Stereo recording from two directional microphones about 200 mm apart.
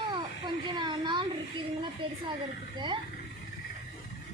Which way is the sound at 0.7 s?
20° right (ahead or behind).